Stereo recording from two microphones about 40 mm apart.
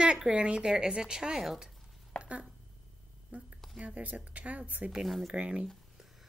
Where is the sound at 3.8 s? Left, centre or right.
Right.